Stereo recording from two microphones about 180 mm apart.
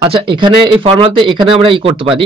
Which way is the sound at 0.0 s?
30° right (ahead or behind).